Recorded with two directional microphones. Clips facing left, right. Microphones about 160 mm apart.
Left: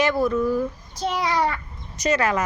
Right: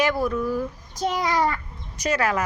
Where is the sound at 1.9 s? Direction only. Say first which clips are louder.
Left 2 dB; 10° right (ahead or behind).